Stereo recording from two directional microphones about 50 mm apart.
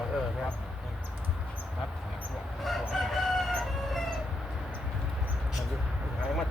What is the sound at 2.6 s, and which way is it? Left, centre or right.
Crowing, centre.